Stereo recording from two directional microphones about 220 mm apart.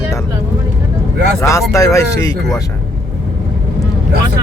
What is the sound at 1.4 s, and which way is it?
Speech, 15° left (ahead or behind).